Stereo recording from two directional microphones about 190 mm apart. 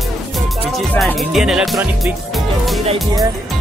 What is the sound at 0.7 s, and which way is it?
Speech, 5° left (ahead or behind).